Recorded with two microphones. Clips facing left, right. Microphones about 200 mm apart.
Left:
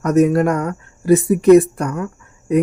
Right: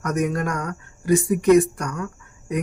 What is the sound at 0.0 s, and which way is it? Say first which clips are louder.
Speech: left 10 dB; 30° left (ahead or behind).